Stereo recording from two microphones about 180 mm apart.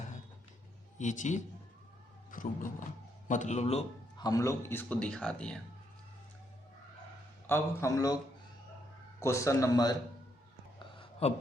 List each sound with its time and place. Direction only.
0.9 s a man's voice: 45° left (ahead or behind)
2.3 s a sound: 45° left (ahead or behind)
3.2 s a man's voice: 40° left (ahead or behind)
4.2 s a man's voice: 20° left (ahead or behind)
7.4 s a man's voice: 15° left (ahead or behind)
9.2 s a man's voice: 15° left (ahead or behind)
10.8 s a sound: 30° left (ahead or behind)